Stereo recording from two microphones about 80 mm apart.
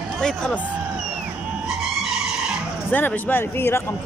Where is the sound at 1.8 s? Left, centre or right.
Centre.